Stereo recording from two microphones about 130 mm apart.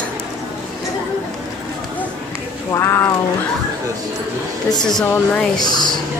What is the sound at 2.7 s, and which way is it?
Speech, 20° left (ahead or behind).